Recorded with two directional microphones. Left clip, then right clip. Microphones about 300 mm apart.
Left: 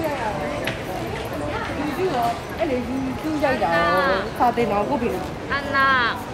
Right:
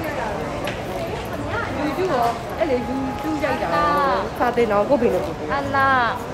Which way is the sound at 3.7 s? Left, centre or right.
Centre.